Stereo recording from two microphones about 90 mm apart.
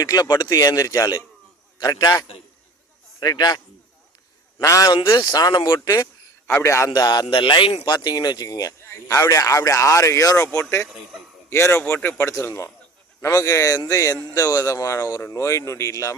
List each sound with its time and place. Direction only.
0.0 s a man's voice: 45° left (ahead or behind)
4.6 s a man's voice: 40° left (ahead or behind)
4.9 s speech: 70° left (ahead or behind)
5.1 s speech: 45° left (ahead or behind)
6.6 s a man's voice: 30° left (ahead or behind)
6.9 s speech: 50° left (ahead or behind)
7.3 s speech: 65° left (ahead or behind)
7.9 s speech: 55° left (ahead or behind)
8.8 s a man's voice: 30° left (ahead or behind)
10.8 s speech: centre (ahead or behind)
11.4 s a man's voice: 30° left (ahead or behind)